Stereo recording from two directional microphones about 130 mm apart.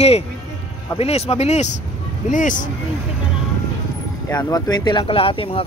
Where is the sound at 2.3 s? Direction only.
90° left.